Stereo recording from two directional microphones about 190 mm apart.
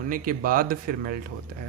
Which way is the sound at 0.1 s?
45° right (ahead or behind).